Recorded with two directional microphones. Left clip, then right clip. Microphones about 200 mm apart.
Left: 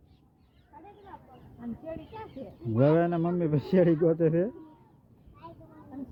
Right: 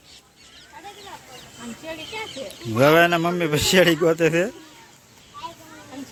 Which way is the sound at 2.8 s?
15° right (ahead or behind).